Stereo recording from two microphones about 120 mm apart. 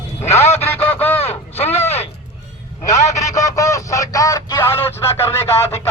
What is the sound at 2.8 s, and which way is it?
Speech, 80° left.